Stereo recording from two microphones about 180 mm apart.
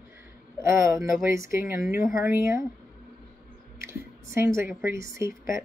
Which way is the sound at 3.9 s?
15° right (ahead or behind).